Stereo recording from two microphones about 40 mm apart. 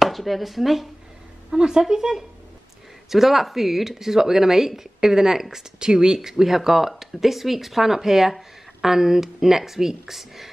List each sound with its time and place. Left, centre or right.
0.0 s speech: centre
1.5 s speech: centre